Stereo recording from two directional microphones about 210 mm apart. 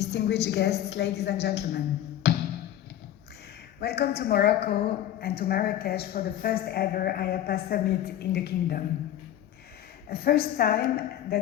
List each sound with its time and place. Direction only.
0.0 s a woman's voice: 50° left (ahead or behind)
2.2 s music: 50° left (ahead or behind)
3.8 s a woman's voice: 50° left (ahead or behind)
10.1 s a woman's voice: 45° left (ahead or behind)